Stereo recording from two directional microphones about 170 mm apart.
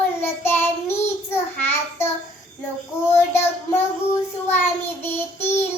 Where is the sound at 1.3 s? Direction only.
15° left (ahead or behind).